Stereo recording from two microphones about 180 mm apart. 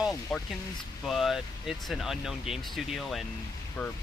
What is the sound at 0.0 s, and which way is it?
Speech, centre (ahead or behind).